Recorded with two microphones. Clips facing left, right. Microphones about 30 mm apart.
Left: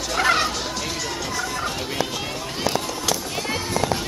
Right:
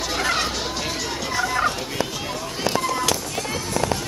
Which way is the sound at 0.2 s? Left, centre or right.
Centre.